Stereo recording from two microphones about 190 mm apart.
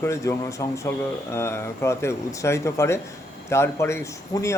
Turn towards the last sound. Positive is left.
turn(degrees=15)  # may be behind; listen again after turning